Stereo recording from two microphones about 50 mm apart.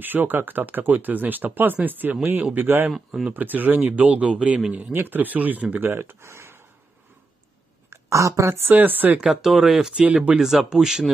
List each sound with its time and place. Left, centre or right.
0.0 s speech: right
4.7 s speech: right
5.9 s speech: right
7.9 s speech: right
8.6 s speech: right
9.2 s speech: centre
9.9 s speech: right
10.3 s speech: centre